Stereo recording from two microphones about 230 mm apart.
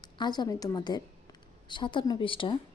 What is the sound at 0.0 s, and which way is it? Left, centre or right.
A woman's voice, centre.